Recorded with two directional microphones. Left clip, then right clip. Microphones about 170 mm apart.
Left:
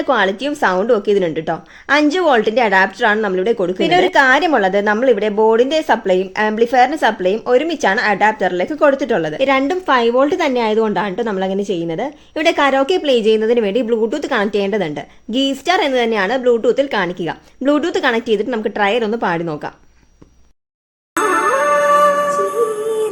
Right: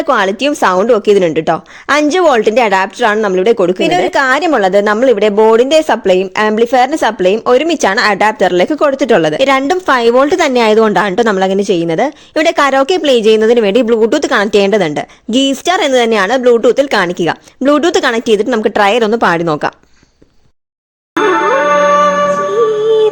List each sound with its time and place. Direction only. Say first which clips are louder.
0.0 s a woman's voice: right 4 dB; 50° right (ahead or behind)
21.2 s music: right 4 dB; 15° right (ahead or behind)
21.7 s music: right 4 dB; 30° right (ahead or behind)